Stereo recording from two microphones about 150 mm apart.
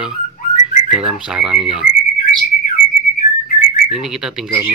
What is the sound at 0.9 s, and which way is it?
Speech, 5° right (ahead or behind).